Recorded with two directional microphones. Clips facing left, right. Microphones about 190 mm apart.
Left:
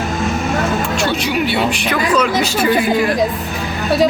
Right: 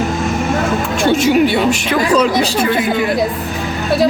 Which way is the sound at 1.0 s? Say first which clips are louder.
Right 11 dB; 45° right (ahead or behind).